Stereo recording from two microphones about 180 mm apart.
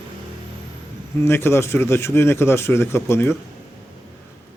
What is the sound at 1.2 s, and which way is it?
A man's voice, 15° left (ahead or behind).